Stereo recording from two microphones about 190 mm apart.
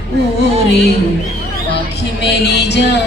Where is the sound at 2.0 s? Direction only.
60° left (ahead or behind).